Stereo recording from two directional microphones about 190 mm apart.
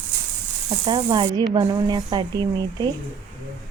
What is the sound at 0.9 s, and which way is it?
Speech, 25° right (ahead or behind).